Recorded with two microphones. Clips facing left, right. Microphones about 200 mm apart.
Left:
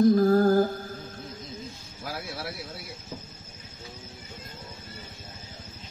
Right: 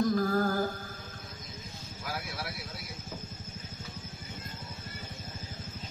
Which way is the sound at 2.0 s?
25° left (ahead or behind).